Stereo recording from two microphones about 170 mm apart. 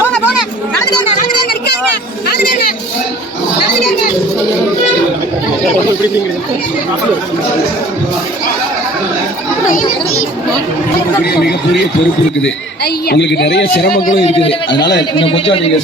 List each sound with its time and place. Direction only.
11.3 s a sound: 70° left (ahead or behind)
12.4 s a man's voice: 80° left; by 14.1 s 60° left (ahead or behind)
14.3 s a man's voice: 35° left (ahead or behind)